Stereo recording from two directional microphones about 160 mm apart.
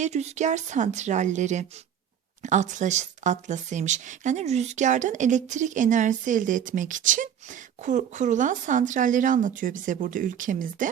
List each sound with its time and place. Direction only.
0.0 s speech: 45° right (ahead or behind)